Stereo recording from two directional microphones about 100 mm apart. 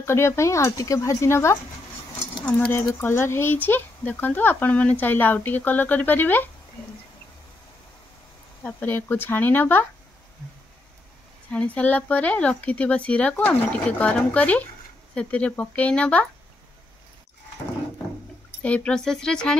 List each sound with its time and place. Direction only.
0.0 s speech: 25° left (ahead or behind)
2.9 s speech: 25° left (ahead or behind)
8.6 s speech: 20° left (ahead or behind)
11.5 s speech: 15° left (ahead or behind)
18.6 s speech: 15° left (ahead or behind)